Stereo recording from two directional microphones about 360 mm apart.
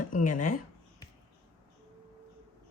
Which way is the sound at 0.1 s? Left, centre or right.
Left.